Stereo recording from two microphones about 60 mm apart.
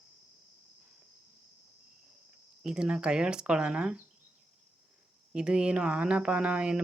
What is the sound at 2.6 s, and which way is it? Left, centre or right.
Speech, centre.